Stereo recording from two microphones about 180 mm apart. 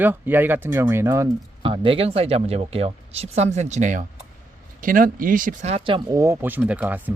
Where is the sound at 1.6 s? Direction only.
30° right (ahead or behind).